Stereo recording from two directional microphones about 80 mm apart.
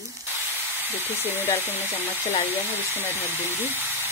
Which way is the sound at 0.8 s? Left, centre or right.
Right.